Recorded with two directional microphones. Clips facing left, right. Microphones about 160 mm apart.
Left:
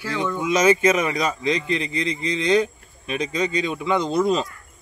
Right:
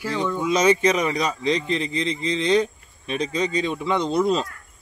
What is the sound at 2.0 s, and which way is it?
Speech, 30° right (ahead or behind).